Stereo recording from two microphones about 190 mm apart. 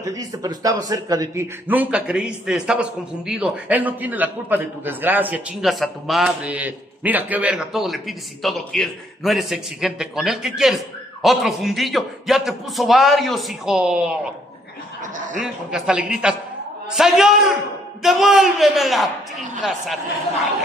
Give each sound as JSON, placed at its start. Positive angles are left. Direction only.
{"t": 0.0, "sound": "a man's voice", "side_deg": -20}
{"t": 15.1, "sound": "speech", "side_deg": -40}
{"t": 15.4, "sound": "a man's voice", "side_deg": -5}